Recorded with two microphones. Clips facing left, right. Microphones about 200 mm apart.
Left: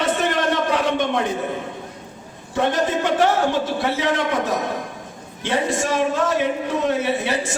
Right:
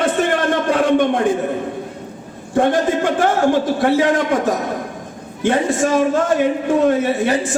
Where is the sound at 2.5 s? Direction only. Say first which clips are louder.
Right 5 dB; 50° right (ahead or behind).